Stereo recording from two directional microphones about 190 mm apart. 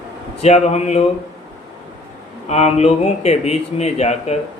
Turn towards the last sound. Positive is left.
turn(degrees=35)  # may be behind; listen again after turning